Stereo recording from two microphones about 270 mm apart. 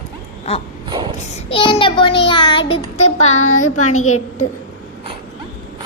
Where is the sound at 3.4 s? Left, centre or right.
Left.